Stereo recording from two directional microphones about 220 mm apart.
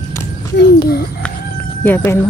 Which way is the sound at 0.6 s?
45° left (ahead or behind).